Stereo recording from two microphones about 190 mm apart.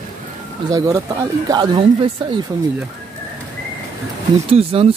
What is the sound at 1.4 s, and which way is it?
Speech, 25° right (ahead or behind).